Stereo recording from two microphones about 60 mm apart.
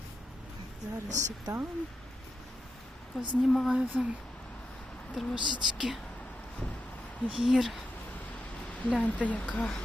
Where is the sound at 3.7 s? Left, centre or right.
Centre.